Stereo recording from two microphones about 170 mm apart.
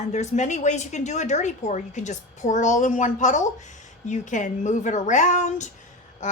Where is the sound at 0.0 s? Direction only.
40° left (ahead or behind).